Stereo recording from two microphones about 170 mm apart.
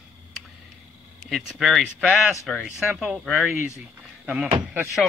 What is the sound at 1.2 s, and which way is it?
Speech, centre (ahead or behind).